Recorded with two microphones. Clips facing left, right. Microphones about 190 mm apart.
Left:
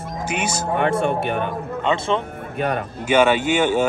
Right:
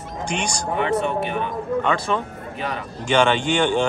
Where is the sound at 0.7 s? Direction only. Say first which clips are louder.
Left 2 dB; 55° left (ahead or behind).